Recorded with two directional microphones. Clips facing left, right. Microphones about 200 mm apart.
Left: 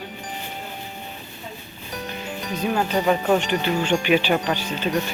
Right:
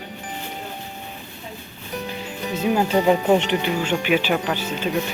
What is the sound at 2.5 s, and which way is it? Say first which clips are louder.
Speech: right 3 dB; 20° right (ahead or behind).